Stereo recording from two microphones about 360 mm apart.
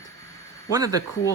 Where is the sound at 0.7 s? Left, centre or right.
Centre.